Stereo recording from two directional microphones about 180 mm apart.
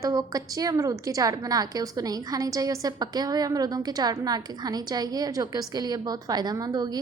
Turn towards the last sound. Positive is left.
turn(degrees=-20)  # may be behind; listen again after turning